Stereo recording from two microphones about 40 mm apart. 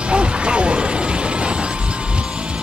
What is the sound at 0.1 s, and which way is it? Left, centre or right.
Music, right.